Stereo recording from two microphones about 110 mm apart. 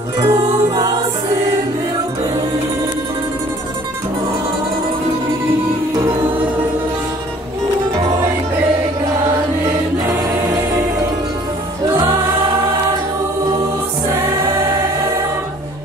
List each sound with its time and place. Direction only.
0.2 s music: 35° right (ahead or behind)
10.0 s choir: 25° right (ahead or behind)